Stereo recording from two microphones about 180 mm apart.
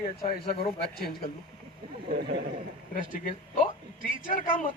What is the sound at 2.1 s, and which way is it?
Speech, 65° right (ahead or behind).